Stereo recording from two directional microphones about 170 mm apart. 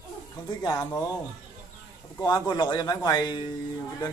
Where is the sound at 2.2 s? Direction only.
25° left (ahead or behind).